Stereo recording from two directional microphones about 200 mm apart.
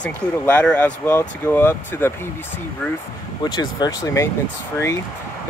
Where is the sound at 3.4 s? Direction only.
20° left (ahead or behind).